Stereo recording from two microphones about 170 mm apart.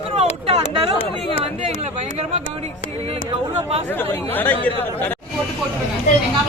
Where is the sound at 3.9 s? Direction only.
10° left (ahead or behind).